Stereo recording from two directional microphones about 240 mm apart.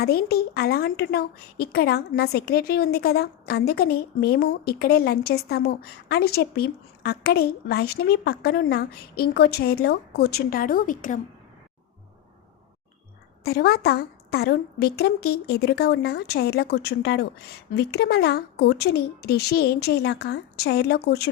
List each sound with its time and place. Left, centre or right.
0.0 s a woman's voice: left
13.4 s a woman's voice: left